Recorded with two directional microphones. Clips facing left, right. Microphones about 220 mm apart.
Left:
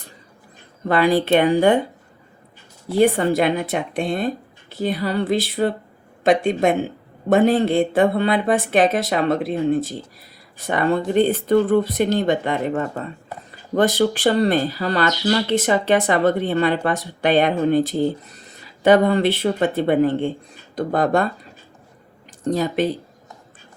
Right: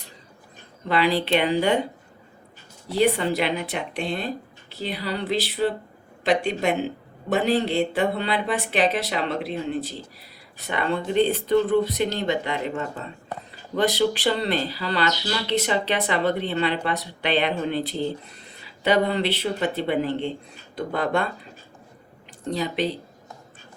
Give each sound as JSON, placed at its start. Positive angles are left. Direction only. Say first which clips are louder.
{"t": 0.9, "sound": "speech", "louder": "left 5 dB", "side_deg": 50}
{"t": 2.9, "sound": "speech", "louder": "left 5 dB", "side_deg": 50}
{"t": 22.4, "sound": "speech", "louder": "left 5 dB", "side_deg": 45}